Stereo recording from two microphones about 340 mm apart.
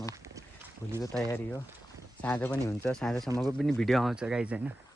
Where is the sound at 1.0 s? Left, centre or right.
Centre.